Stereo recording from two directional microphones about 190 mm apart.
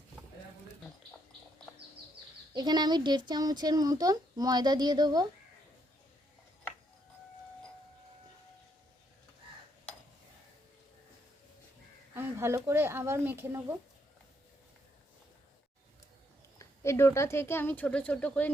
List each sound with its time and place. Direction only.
2.5 s speech: 20° right (ahead or behind)
12.1 s speech: 15° right (ahead or behind)
16.6 s speech: 15° left (ahead or behind)